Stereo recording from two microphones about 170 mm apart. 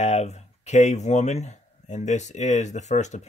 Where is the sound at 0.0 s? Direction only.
40° left (ahead or behind).